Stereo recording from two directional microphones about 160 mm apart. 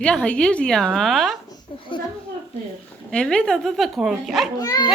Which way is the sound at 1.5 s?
30° left (ahead or behind).